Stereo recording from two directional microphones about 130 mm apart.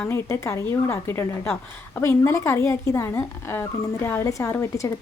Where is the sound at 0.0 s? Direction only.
20° left (ahead or behind).